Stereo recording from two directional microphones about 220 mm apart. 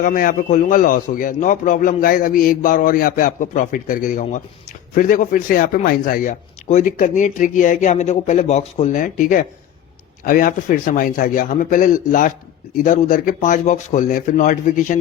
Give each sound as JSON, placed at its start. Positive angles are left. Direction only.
{"t": 0.0, "sound": "speech", "side_deg": 40}